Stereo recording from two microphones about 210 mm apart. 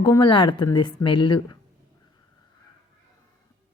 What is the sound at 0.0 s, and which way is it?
A woman's voice, 20° left (ahead or behind).